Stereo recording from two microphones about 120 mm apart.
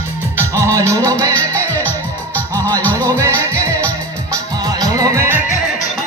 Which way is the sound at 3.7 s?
10° left (ahead or behind).